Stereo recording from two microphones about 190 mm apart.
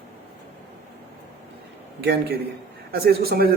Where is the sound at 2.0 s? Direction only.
60° right (ahead or behind).